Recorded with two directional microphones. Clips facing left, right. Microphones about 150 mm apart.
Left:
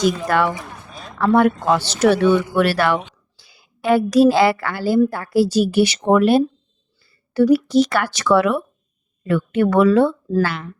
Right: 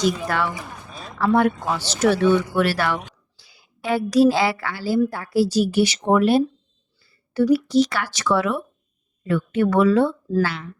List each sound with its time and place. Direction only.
0.3 s speech: 55° left (ahead or behind)
0.6 s a sound: centre (ahead or behind)
1.2 s a woman's voice: 60° left (ahead or behind)